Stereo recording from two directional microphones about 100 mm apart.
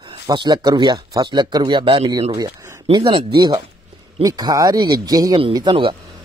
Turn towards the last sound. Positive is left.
turn(degrees=-60)  # may be behind; listen again after turning